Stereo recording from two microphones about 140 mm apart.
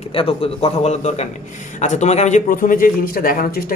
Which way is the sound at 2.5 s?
80° left.